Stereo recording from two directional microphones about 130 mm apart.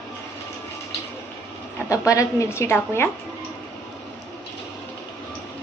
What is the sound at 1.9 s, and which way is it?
A woman's voice, 25° left (ahead or behind).